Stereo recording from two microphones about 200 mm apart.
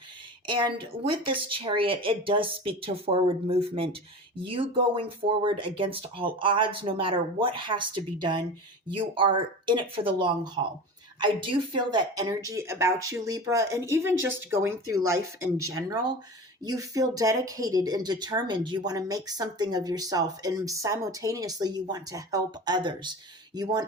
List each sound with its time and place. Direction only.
0.4 s speech: 25° right (ahead or behind)